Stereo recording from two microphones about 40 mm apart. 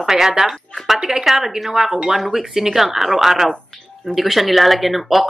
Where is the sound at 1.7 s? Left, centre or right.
Centre.